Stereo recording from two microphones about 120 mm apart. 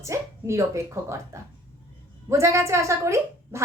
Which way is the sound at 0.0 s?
25° right (ahead or behind).